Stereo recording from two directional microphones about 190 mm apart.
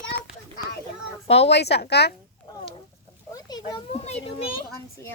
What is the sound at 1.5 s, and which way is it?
Speech, 60° left (ahead or behind).